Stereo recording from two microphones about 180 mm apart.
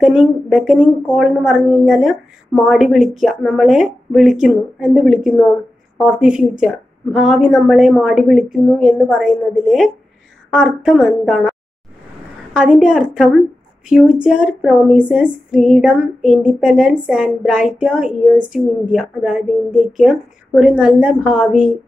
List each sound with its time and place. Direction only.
0.0 s a woman's voice: 5° right (ahead or behind)
12.5 s a woman's voice: 5° right (ahead or behind)